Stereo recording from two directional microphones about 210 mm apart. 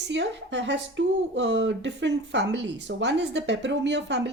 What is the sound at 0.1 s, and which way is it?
Speech, 60° right (ahead or behind).